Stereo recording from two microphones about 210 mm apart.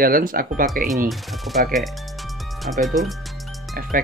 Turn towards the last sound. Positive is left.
turn(degrees=-40)  # may be behind; listen again after turning